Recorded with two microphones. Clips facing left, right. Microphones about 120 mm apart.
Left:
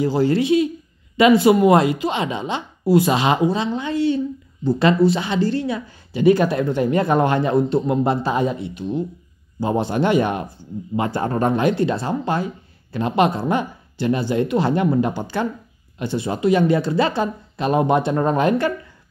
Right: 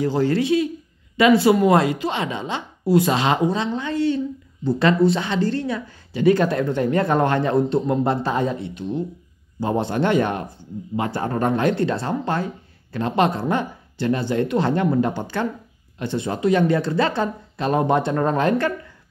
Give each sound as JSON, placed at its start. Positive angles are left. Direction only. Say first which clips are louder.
{"t": 0.0, "sound": "speech", "louder": "left 2 dB", "side_deg": 10}
{"t": 11.1, "sound": "speech", "louder": "left 2 dB", "side_deg": 25}
{"t": 11.5, "sound": "speech", "louder": "left 1 dB", "side_deg": 10}